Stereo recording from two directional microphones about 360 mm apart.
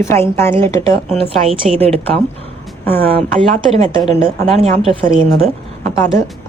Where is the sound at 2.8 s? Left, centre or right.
Centre.